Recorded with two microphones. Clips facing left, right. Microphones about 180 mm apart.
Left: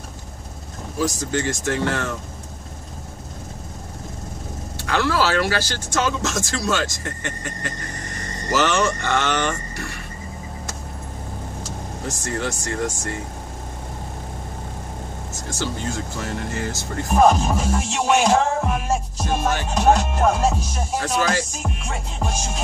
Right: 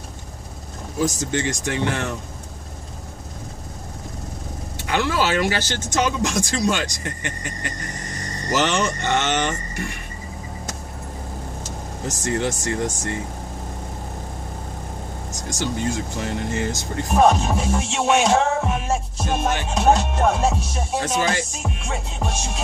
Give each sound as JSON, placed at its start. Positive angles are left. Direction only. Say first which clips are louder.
{"t": 1.3, "sound": "speech", "louder": "left 1 dB", "side_deg": -20}
{"t": 4.7, "sound": "speech", "louder": "left 1 dB", "side_deg": -20}
{"t": 12.1, "sound": "speech", "louder": "right 3 dB", "side_deg": -20}
{"t": 15.3, "sound": "speech", "louder": "right 2 dB", "side_deg": -15}
{"t": 17.1, "sound": "music", "louder": "left 1 dB", "side_deg": 0}
{"t": 21.0, "sound": "speech", "louder": "left 1 dB", "side_deg": -20}
{"t": 21.6, "sound": "music", "louder": "right 1 dB", "side_deg": 0}